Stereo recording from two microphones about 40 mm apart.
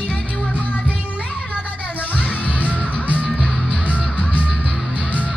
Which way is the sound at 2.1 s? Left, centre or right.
Left.